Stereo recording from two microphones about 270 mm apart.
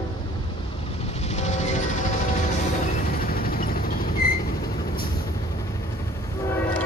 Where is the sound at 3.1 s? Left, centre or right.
Left.